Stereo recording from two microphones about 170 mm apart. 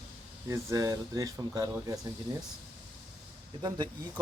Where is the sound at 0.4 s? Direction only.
15° right (ahead or behind).